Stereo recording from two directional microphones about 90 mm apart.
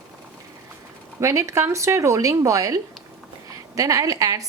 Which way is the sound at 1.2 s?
35° right (ahead or behind).